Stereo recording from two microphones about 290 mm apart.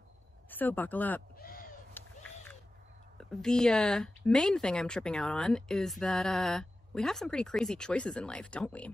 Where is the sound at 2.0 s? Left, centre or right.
Centre.